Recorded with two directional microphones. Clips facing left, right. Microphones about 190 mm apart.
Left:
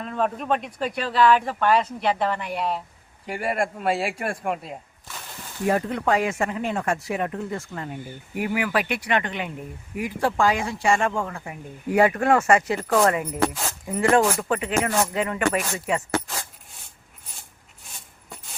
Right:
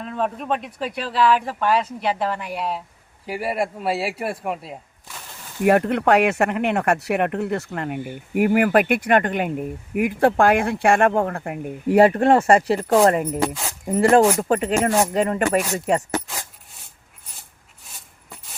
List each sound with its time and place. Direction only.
0.0 s speech: centre (ahead or behind)
5.6 s speech: 65° right (ahead or behind)
11.9 s speech: 35° right (ahead or behind)